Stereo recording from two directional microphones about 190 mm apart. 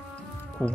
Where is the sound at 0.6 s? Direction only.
5° left (ahead or behind).